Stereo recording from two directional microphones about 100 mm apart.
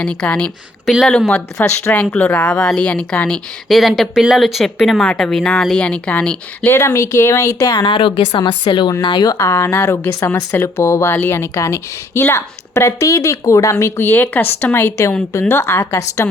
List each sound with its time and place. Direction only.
0.0 s a woman's voice: 10° left (ahead or behind)
1.6 s a woman's voice: 25° left (ahead or behind)
6.7 s speech: 25° left (ahead or behind)
7.8 s a woman's voice: 55° left (ahead or behind)
9.4 s a woman's voice: 25° left (ahead or behind)